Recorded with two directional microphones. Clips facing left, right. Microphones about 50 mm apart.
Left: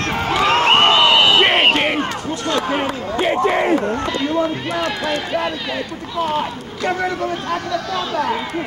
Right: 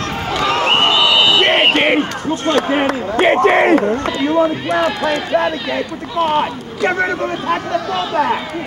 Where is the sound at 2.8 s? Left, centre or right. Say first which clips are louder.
Right 5 dB; right.